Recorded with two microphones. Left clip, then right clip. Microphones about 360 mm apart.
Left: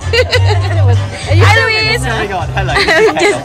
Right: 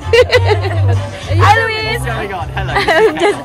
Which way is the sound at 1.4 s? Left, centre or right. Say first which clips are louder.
Left 1 dB; centre.